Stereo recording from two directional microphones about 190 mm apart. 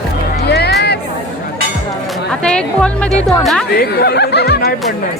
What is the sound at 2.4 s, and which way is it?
Speech, 5° left (ahead or behind).